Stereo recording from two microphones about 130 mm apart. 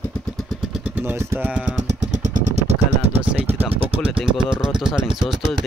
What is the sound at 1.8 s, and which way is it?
Vehicle, 65° right (ahead or behind).